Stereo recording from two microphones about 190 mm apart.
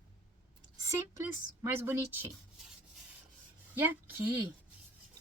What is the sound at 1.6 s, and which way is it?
Speech, 10° right (ahead or behind).